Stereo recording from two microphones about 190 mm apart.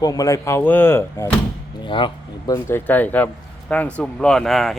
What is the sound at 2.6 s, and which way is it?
Speech, 10° left (ahead or behind).